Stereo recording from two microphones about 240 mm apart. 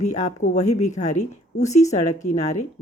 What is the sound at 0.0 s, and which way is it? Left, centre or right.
Speech, left.